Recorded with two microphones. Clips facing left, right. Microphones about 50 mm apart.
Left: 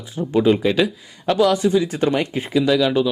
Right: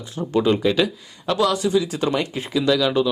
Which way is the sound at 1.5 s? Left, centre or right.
Left.